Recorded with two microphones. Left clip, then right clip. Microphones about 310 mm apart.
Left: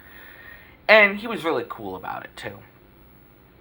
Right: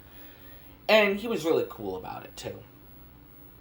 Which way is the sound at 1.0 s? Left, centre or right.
Left.